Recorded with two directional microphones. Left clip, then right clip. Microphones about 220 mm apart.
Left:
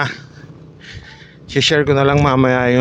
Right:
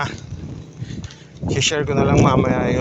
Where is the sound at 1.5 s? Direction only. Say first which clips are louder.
Left 6 dB; 55° left (ahead or behind).